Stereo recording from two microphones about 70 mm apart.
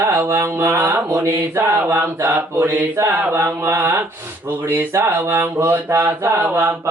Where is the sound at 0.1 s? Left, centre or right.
Right.